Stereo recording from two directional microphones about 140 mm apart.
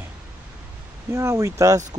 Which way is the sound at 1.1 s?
20° right (ahead or behind).